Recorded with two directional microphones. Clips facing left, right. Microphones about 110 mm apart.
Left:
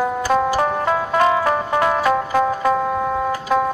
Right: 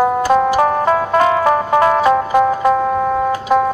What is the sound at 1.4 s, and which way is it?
Music, 25° right (ahead or behind).